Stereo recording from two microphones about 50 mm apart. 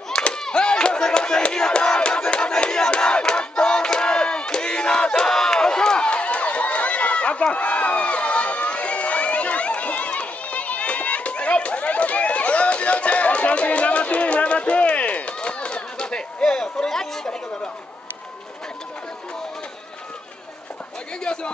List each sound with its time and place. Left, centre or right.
0.1 s a sound: centre
7.5 s crowd: left; by 17.4 s centre
21.2 s speech: centre